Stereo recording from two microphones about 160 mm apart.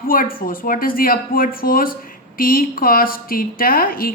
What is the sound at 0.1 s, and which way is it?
A woman's voice, 60° left (ahead or behind).